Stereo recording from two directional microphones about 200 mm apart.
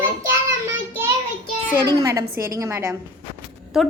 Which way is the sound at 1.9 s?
20° right (ahead or behind).